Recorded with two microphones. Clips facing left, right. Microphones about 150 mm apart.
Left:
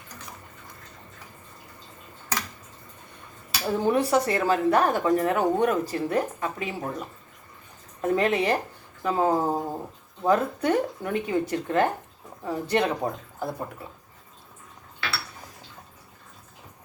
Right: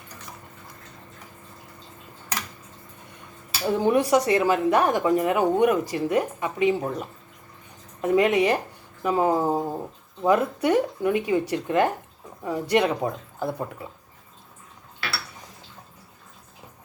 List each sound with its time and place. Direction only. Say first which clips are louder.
3.7 s a woman's voice: right 3 dB; 15° right (ahead or behind)
8.0 s a woman's voice: right 3 dB; 15° right (ahead or behind)